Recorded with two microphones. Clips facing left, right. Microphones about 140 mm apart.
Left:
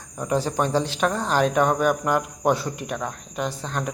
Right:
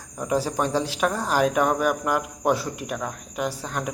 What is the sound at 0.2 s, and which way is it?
Speech, 5° right (ahead or behind).